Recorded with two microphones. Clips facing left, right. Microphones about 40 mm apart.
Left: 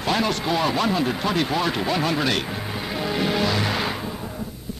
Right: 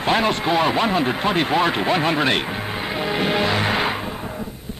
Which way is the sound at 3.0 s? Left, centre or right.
Right.